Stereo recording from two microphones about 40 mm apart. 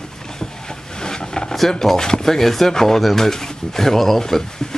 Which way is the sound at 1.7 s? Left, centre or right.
Centre.